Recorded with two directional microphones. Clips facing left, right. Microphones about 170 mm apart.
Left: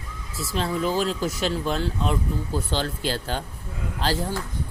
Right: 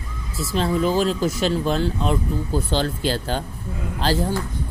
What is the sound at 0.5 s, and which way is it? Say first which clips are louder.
Speech: right 4 dB; 30° right (ahead or behind).